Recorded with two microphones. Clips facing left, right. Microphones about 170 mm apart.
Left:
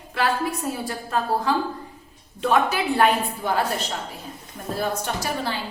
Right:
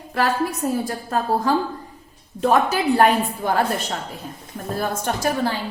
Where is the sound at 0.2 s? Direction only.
45° right (ahead or behind).